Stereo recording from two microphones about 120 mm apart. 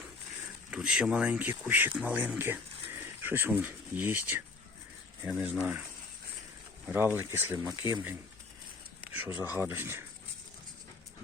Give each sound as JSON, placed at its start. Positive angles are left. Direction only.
{"t": 0.7, "sound": "speech", "side_deg": -10}
{"t": 6.8, "sound": "speech", "side_deg": -15}
{"t": 9.1, "sound": "speech", "side_deg": -15}